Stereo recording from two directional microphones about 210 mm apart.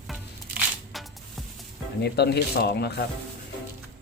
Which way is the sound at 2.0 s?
50° left (ahead or behind).